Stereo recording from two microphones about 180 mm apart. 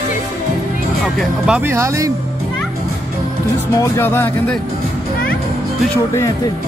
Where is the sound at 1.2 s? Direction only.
5° right (ahead or behind).